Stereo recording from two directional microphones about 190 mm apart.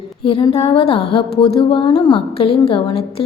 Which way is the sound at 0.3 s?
30° left (ahead or behind).